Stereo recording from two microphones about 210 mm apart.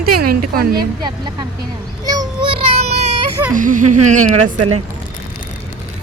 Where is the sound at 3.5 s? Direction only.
40° right (ahead or behind).